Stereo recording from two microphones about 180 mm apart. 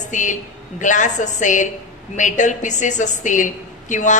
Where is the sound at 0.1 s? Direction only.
45° left (ahead or behind).